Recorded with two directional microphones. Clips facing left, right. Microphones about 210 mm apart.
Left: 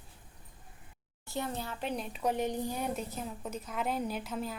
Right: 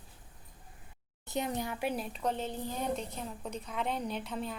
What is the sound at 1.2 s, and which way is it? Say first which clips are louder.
Speech: right 2 dB; 20° right (ahead or behind).